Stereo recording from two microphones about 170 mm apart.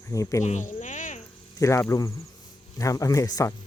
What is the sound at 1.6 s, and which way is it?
Speech, 15° left (ahead or behind).